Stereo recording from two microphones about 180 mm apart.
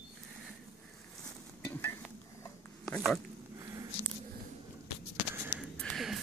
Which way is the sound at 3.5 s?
20° right (ahead or behind).